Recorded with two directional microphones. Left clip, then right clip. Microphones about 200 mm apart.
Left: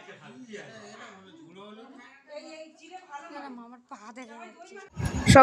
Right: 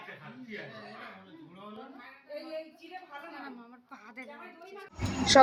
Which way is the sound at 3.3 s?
55° left (ahead or behind).